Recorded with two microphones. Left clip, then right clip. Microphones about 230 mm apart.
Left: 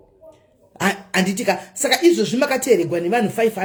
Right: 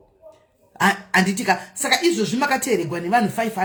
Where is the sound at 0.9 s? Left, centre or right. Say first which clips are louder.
Right 1 dB; right.